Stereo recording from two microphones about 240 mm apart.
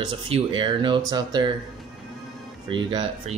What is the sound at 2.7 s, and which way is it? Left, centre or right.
Speech, centre.